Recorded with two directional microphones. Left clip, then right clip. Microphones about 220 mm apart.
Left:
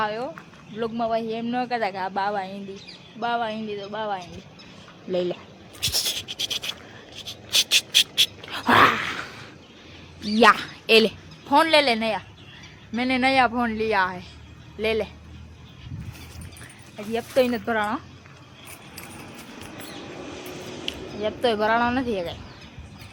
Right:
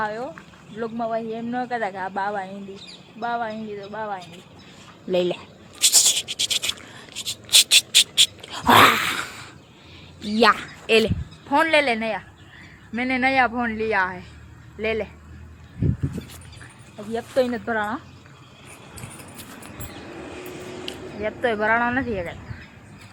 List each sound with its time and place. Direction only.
0.0 s a woman's voice: centre (ahead or behind)
5.1 s speech: 15° right (ahead or behind)
5.8 s scratch: 15° right (ahead or behind)
7.2 s dog: 20° right (ahead or behind); by 8.7 s centre (ahead or behind)
8.7 s gasp: 15° right (ahead or behind)
10.3 s a woman's voice: 5° left (ahead or behind)
10.6 s a woman's voice: 20° left (ahead or behind)
11.4 s a woman's voice: 10° left (ahead or behind)
17.1 s a woman's voice: 5° left (ahead or behind)
21.2 s speech: 10° left (ahead or behind)